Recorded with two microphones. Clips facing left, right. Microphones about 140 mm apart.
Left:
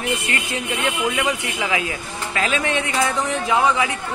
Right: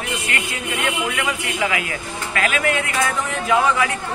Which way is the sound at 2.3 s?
25° left (ahead or behind).